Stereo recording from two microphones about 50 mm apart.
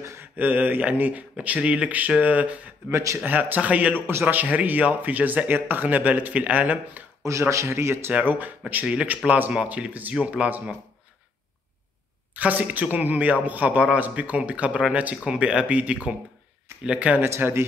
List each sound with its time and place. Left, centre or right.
0.4 s speech: right
2.9 s a man's voice: right
3.3 s speech: right
4.1 s a man's voice: right
4.4 s speech: right
7.2 s a man's voice: right
8.1 s speech: right
12.4 s speech: right
17.4 s a man's voice: right